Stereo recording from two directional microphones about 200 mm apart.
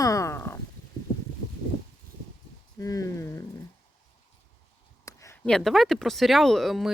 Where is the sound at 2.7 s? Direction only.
15° left (ahead or behind).